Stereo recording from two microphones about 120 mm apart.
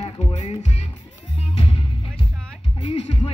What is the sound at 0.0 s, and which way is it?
Music, 65° left (ahead or behind).